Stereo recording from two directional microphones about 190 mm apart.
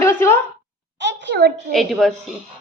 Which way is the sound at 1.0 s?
65° right (ahead or behind).